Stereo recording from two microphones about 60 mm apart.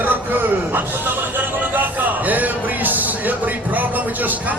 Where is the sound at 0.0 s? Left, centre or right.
Right.